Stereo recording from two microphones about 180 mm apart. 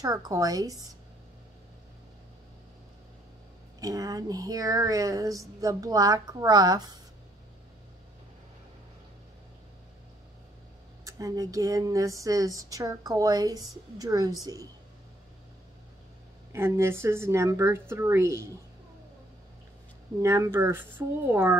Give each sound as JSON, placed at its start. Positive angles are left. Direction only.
{"t": 0.0, "sound": "speech", "side_deg": -20}
{"t": 3.8, "sound": "speech", "side_deg": -20}
{"t": 11.1, "sound": "speech", "side_deg": -20}
{"t": 16.5, "sound": "a woman's voice", "side_deg": -15}
{"t": 20.2, "sound": "a woman's voice", "side_deg": -15}